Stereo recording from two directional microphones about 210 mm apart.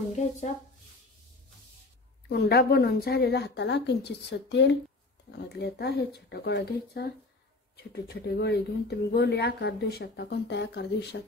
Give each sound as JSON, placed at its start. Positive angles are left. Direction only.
{"t": 0.1, "sound": "speech", "side_deg": 35}
{"t": 2.2, "sound": "speech", "side_deg": 50}